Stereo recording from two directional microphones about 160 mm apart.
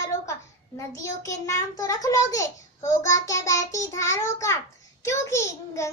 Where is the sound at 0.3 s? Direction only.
20° left (ahead or behind).